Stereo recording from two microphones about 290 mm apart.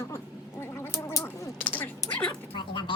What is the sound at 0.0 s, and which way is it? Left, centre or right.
Gargling, centre.